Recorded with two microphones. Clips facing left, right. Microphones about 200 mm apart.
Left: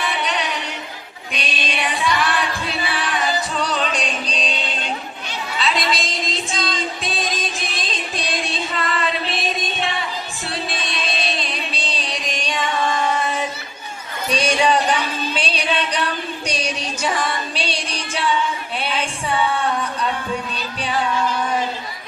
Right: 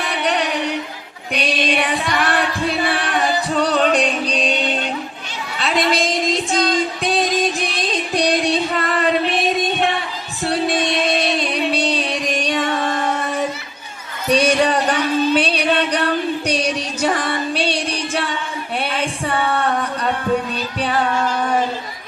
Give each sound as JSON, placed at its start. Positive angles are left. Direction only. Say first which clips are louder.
{"t": 0.2, "sound": "music", "louder": "right 5 dB", "side_deg": -60}
{"t": 10.4, "sound": "music", "louder": "right 11 dB", "side_deg": -60}
{"t": 14.3, "sound": "a sound", "louder": "right 3 dB", "side_deg": -60}
{"t": 15.4, "sound": "music", "louder": "right 5 dB", "side_deg": -60}
{"t": 18.8, "sound": "a sound", "louder": "right 4 dB", "side_deg": -60}
{"t": 20.8, "sound": "music", "louder": "right 2 dB", "side_deg": -55}